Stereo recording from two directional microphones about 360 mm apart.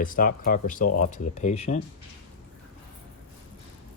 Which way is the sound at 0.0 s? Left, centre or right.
Left.